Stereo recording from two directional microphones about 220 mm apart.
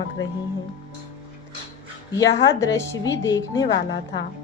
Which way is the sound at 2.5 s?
15° left (ahead or behind).